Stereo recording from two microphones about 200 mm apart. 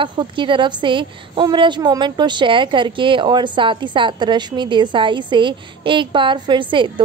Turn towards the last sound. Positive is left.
turn(degrees=-25)  # may be behind; listen again after turning